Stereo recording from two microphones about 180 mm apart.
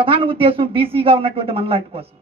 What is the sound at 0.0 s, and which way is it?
A woman's voice, 30° right (ahead or behind).